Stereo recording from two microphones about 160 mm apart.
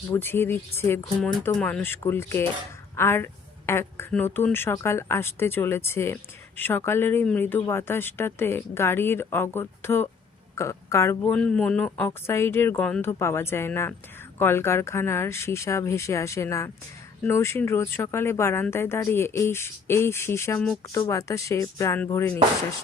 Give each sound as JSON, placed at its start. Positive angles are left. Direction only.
{"t": 0.1, "sound": "speech", "side_deg": 15}
{"t": 11.3, "sound": "speech", "side_deg": 5}